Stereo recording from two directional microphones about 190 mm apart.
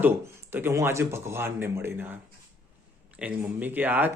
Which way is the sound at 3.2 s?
10° right (ahead or behind).